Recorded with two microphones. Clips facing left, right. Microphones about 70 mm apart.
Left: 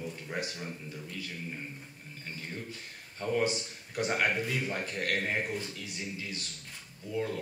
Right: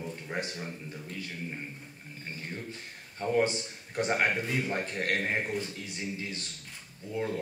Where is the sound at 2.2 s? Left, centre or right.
Right.